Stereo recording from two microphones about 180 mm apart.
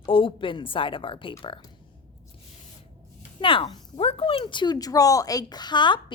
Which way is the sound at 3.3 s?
30° left (ahead or behind).